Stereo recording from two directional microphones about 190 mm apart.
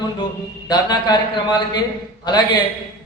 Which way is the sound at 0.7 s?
20° left (ahead or behind).